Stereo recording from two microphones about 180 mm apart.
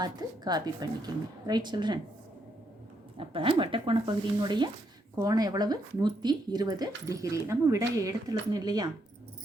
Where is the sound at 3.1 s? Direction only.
30° right (ahead or behind).